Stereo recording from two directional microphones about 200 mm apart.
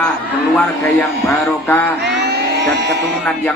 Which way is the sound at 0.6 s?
10° left (ahead or behind).